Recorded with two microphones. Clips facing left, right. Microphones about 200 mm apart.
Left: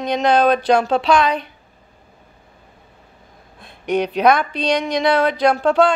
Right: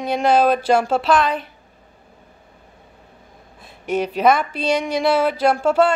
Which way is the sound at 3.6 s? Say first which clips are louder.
Left 2 dB; 5° right (ahead or behind).